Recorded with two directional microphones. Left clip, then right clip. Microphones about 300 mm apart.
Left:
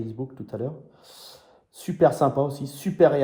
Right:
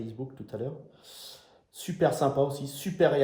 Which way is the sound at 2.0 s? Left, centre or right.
Centre.